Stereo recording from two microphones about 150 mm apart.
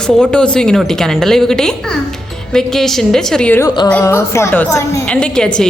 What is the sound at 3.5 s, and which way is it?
A woman's voice, 25° left (ahead or behind).